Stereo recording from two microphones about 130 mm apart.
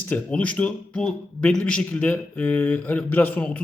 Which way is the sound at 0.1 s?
10° left (ahead or behind).